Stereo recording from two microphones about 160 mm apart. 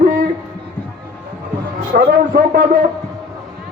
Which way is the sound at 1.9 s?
55° right (ahead or behind).